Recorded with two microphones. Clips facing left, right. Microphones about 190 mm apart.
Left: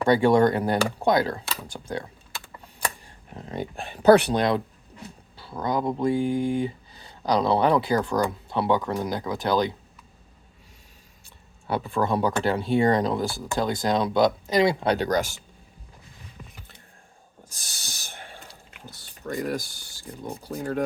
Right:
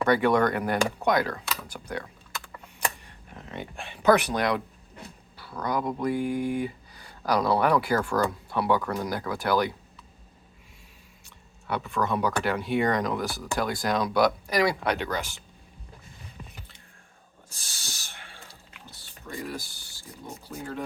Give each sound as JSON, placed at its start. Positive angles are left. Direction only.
{"t": 0.0, "sound": "speech", "side_deg": 30}
{"t": 11.7, "sound": "speech", "side_deg": 30}
{"t": 18.7, "sound": "a sound", "side_deg": 45}
{"t": 20.5, "sound": "speech", "side_deg": 40}